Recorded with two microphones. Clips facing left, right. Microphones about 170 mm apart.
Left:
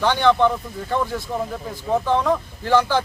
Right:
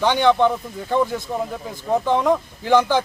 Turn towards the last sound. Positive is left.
turn(degrees=-15)  # may be behind; listen again after turning